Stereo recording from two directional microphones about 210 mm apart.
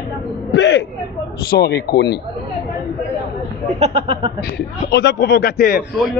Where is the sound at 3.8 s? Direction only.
25° right (ahead or behind).